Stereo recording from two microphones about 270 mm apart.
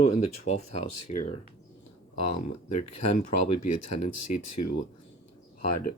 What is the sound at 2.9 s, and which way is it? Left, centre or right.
Speech, left.